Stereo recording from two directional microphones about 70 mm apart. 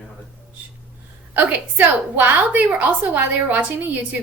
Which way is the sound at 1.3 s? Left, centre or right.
Right.